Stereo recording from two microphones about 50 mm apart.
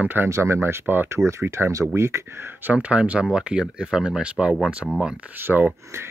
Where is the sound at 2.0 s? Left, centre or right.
Right.